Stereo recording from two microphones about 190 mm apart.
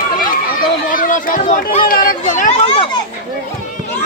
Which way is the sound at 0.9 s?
45° left (ahead or behind).